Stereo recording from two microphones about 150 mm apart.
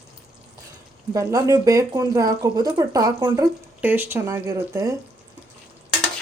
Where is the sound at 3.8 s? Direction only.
15° right (ahead or behind).